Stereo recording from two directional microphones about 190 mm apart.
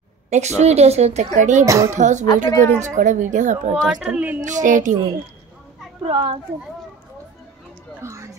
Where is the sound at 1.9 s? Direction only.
40° right (ahead or behind).